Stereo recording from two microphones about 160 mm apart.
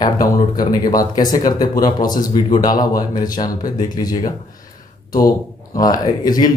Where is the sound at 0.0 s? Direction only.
25° left (ahead or behind).